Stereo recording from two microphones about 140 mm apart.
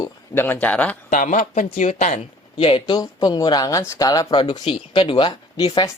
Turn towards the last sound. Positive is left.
turn(degrees=30)  # may be behind; listen again after turning